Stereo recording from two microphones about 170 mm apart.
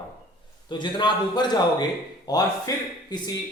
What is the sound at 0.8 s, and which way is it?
A man's voice, 25° left (ahead or behind).